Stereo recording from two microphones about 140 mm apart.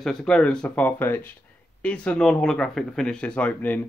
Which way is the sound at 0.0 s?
5° left (ahead or behind).